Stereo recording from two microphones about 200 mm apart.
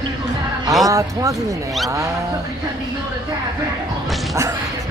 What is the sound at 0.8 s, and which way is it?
Speech, 15° right (ahead or behind).